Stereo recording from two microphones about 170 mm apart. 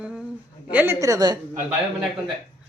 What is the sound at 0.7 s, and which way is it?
Speech, 10° right (ahead or behind).